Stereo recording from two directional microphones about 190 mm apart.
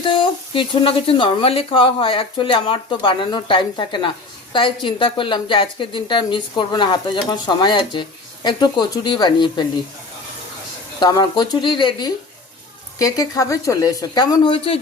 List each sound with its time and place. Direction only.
0.0 s a woman's voice: 25° left (ahead or behind)
11.0 s a woman's voice: 20° left (ahead or behind)